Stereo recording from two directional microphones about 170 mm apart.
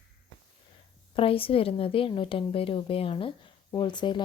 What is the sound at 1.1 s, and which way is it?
A woman's voice, 30° left (ahead or behind).